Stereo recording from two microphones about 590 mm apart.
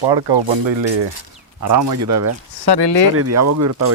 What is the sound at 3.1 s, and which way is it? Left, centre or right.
Speech, right.